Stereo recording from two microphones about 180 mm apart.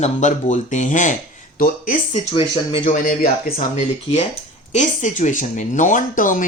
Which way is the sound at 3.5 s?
35° left (ahead or behind).